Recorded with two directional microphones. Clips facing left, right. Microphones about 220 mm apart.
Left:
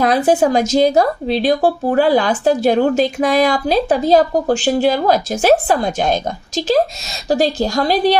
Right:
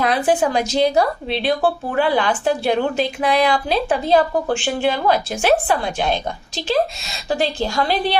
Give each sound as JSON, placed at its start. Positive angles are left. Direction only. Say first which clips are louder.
{"t": 0.0, "sound": "speech", "louder": "left 4 dB", "side_deg": 40}